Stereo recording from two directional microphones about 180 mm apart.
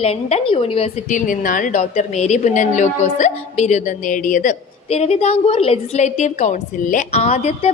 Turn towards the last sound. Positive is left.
turn(degrees=35)  # may be behind; listen again after turning